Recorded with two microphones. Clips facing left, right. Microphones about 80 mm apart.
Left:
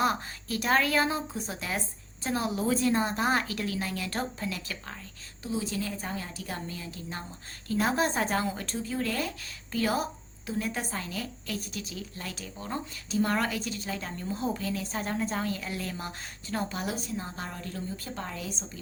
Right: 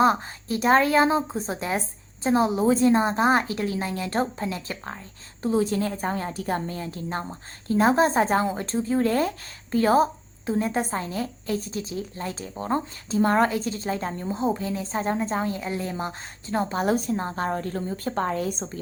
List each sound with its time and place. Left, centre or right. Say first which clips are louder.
0.0 s a woman's voice: right 7 dB; right
5.5 s a woman's voice: right 9 dB; right
16.8 s a woman's voice: right 10 dB; right